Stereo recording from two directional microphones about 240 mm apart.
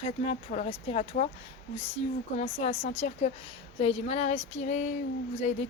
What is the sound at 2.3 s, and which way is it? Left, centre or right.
A woman's voice, left.